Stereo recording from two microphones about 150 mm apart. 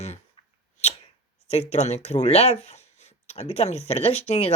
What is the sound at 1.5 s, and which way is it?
Speech, 45° left (ahead or behind).